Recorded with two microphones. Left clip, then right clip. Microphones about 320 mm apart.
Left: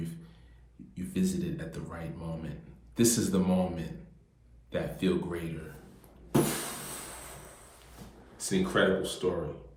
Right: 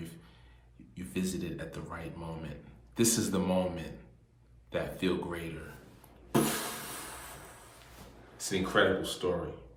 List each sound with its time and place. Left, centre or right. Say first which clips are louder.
0.9 s a man's voice: left 3 dB; centre
6.3 s a sound: left 1 dB; centre
8.4 s speech: even; centre